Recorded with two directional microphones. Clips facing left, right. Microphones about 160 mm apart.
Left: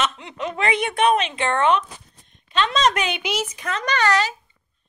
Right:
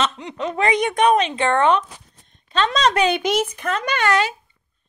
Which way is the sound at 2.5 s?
35° right (ahead or behind).